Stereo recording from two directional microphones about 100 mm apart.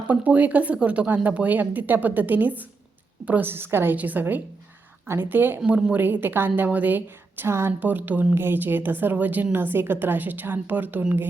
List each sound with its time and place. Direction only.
0.1 s a woman's voice: 15° right (ahead or behind)